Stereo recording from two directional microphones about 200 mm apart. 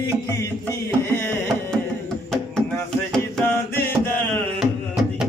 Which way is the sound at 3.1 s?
5° left (ahead or behind).